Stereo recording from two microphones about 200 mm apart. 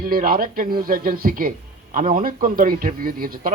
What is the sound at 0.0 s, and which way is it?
Speech, 45° right (ahead or behind).